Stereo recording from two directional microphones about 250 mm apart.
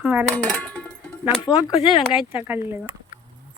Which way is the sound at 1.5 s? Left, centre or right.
Centre.